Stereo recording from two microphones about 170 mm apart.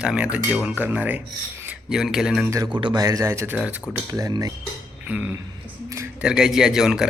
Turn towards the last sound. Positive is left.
turn(degrees=-5)  # may be behind; listen again after turning